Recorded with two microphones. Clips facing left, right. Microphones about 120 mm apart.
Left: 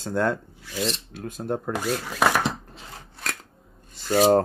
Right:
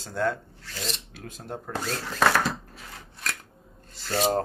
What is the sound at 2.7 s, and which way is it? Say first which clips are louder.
Scissors: left 2 dB; 30° left (ahead or behind).